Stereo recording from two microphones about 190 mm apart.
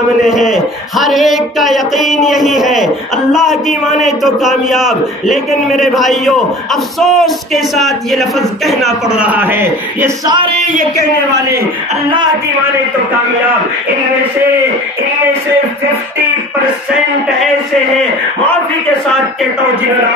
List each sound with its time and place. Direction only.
0.2 s a man's voice: centre (ahead or behind); by 10.5 s 20° right (ahead or behind)
11.3 s a man's voice: 60° right (ahead or behind)